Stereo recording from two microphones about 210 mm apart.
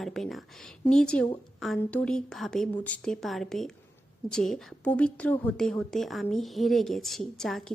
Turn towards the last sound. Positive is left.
turn(degrees=0)  # may be behind; listen again after turning